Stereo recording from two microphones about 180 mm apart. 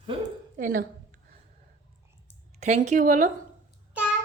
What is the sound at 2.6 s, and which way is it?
Speech, 40° right (ahead or behind).